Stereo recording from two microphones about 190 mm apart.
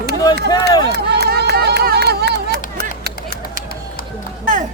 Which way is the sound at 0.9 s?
60° right (ahead or behind).